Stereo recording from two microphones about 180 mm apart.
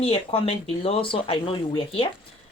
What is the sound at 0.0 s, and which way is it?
Speech, 30° left (ahead or behind).